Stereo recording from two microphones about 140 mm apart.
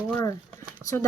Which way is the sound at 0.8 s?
20° right (ahead or behind).